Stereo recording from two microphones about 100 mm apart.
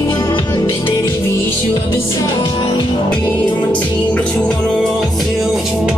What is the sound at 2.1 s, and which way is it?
Music, 40° left (ahead or behind).